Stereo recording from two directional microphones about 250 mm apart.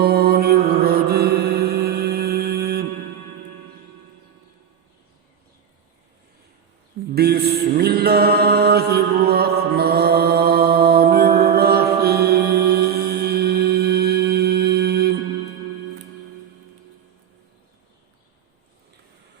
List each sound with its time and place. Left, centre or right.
0.0 s mantra: right
7.1 s mantra: right
7.8 s music: right